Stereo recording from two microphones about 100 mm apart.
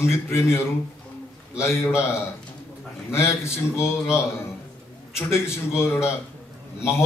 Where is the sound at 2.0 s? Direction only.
25° left (ahead or behind).